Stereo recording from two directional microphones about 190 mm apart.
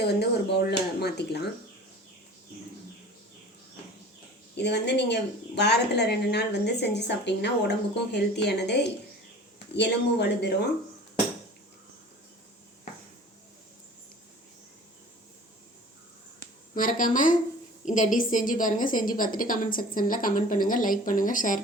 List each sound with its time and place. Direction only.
0.0 s a woman's voice: 60° left (ahead or behind)
4.5 s a woman's voice: 60° left (ahead or behind)
16.7 s a woman's voice: 45° left (ahead or behind)